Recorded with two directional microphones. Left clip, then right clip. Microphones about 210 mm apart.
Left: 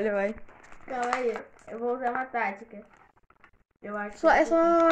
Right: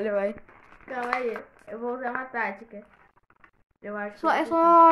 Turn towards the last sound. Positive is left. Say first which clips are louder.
# right 4 dB
turn(degrees=-15)  # may be behind; listen again after turning